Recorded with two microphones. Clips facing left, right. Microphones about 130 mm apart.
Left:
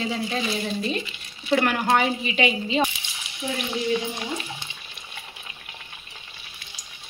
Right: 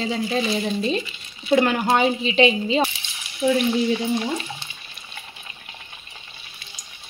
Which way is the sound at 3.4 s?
70° right (ahead or behind).